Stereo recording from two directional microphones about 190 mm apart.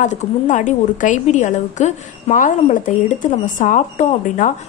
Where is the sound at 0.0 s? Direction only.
40° left (ahead or behind).